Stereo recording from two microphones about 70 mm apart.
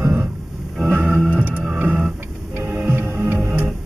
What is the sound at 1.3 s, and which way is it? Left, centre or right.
Music, right.